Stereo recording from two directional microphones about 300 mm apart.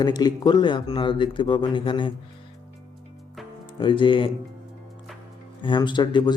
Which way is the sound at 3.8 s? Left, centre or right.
Centre.